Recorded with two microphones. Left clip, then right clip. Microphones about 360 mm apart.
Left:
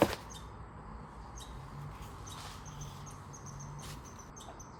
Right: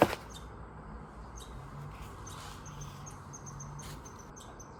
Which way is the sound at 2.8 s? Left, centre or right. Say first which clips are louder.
Right 1 dB; left.